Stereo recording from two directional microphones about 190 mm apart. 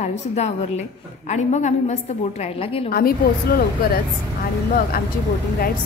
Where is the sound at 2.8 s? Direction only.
50° left (ahead or behind).